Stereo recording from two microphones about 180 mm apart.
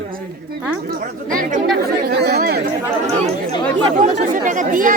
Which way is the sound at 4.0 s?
45° right (ahead or behind).